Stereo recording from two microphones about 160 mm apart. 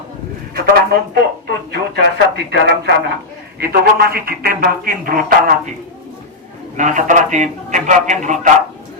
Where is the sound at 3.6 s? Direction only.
75° right (ahead or behind).